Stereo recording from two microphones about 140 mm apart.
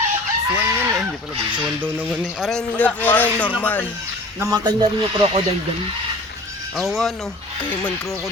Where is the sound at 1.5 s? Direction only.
10° right (ahead or behind); by 3.8 s 10° left (ahead or behind).